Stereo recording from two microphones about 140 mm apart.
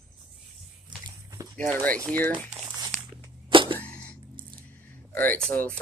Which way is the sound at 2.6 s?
30° right (ahead or behind).